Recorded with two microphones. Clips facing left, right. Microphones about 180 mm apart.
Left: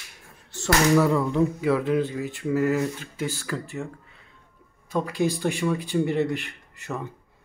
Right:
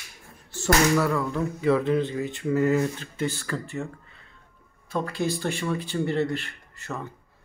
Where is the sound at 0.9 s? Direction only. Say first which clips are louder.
Left 4 dB; 20° left (ahead or behind).